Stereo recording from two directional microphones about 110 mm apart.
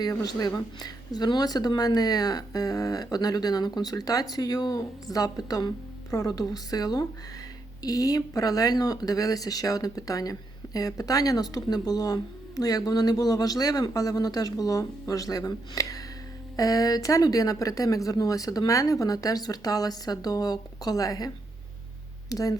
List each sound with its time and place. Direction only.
0.0 s speech: 35° left (ahead or behind)
22.3 s speech: 30° left (ahead or behind)